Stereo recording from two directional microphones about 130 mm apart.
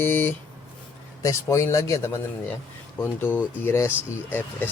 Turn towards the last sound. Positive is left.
turn(degrees=15)  # may be behind; listen again after turning